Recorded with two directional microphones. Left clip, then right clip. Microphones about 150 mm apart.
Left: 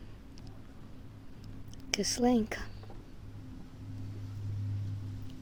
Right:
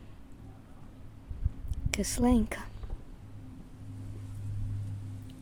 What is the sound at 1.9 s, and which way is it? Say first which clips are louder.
Speech: even; 30° right (ahead or behind).